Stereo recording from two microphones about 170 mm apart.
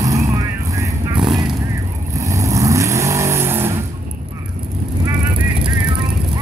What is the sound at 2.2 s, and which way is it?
Vehicle, 20° right (ahead or behind).